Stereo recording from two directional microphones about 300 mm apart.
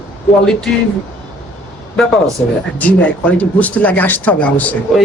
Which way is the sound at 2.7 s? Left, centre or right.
Centre.